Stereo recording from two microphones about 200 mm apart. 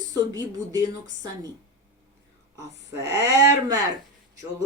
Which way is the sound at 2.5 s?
15° right (ahead or behind).